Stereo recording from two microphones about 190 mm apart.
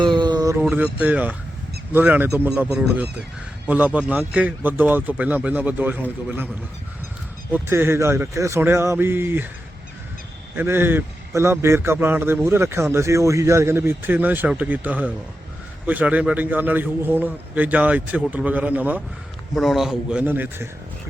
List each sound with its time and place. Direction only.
0.0 s a sound: 25° right (ahead or behind)
0.6 s a man's voice: 10° right (ahead or behind)
7.5 s a man's voice: 10° right (ahead or behind)
10.5 s a man's voice: 10° right (ahead or behind)